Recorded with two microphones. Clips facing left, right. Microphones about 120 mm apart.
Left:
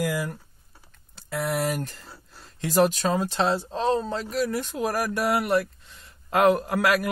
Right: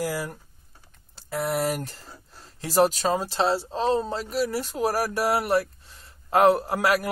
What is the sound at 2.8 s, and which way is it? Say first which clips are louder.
Speech: right 1 dB; 35° right (ahead or behind).